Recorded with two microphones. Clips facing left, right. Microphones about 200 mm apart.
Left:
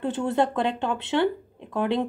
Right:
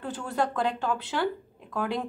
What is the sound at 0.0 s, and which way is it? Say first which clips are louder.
A woman's voice: left 6 dB; 25° left (ahead or behind).